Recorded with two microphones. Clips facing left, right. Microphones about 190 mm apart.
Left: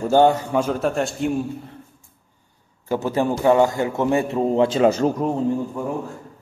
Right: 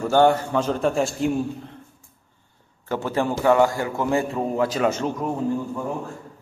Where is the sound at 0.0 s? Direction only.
15° left (ahead or behind); by 1.8 s centre (ahead or behind).